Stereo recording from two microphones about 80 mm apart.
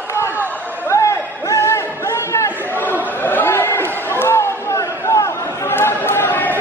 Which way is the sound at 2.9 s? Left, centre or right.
Left.